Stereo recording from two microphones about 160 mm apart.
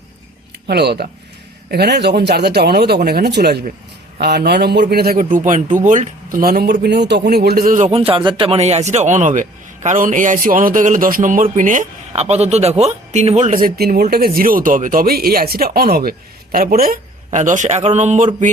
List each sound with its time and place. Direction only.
0.7 s speech: 90° right; by 5.2 s 75° right (ahead or behind)
5.2 s a man's voice: 50° right (ahead or behind); by 6.7 s 75° right (ahead or behind)
6.8 s speech: 90° right; by 7.9 s 60° right (ahead or behind)
7.9 s a man's voice: 35° right (ahead or behind)